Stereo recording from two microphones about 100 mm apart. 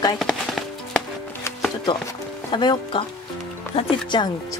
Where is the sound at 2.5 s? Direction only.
50° left (ahead or behind).